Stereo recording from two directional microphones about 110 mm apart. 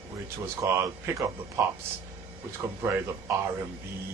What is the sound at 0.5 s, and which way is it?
Speech, 20° right (ahead or behind).